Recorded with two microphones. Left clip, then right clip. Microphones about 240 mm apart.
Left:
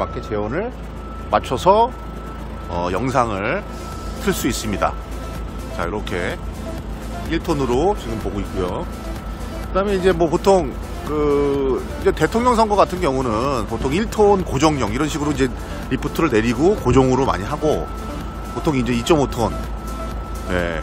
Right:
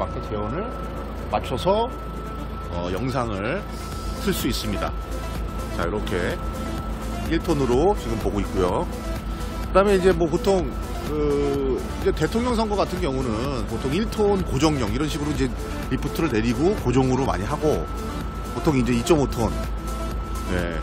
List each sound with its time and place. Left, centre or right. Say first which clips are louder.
1.3 s speech: left 7 dB; centre
5.8 s speech: left 2 dB; centre
10.1 s speech: left 6 dB; centre
20.5 s speech: left 6 dB; centre